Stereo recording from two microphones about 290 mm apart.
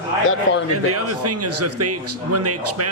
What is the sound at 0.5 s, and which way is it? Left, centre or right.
Speech, left.